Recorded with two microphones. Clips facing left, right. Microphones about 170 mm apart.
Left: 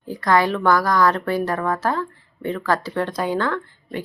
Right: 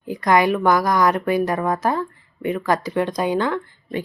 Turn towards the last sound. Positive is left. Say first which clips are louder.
# right 2 dB
turn(degrees=-15)  # may be behind; listen again after turning